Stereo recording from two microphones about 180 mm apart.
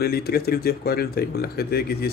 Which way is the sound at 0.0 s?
60° left (ahead or behind).